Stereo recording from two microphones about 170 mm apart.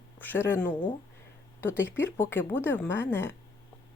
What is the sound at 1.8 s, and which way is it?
Speech, 15° left (ahead or behind).